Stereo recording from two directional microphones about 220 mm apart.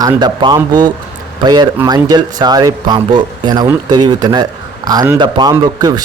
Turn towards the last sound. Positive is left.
turn(degrees=-20)  # may be behind; listen again after turning